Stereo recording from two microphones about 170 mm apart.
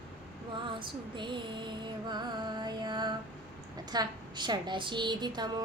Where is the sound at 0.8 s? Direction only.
30° right (ahead or behind).